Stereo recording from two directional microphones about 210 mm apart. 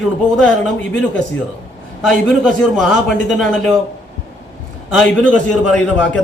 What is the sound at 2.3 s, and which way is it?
A man's voice, centre (ahead or behind).